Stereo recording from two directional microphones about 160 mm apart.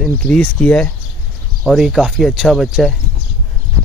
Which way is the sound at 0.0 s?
5° left (ahead or behind).